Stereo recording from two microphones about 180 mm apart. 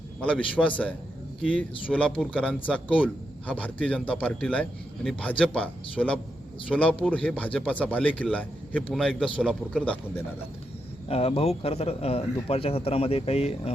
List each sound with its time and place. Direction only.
0.2 s a man's voice: 5° left (ahead or behind)
11.1 s a man's voice: 35° left (ahead or behind)